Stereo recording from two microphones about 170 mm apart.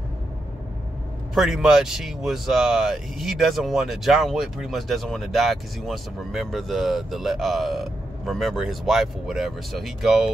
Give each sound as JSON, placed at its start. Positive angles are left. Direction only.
{"t": 1.3, "sound": "speech", "side_deg": 0}